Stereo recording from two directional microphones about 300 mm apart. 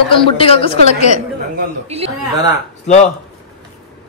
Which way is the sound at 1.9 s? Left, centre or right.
Centre.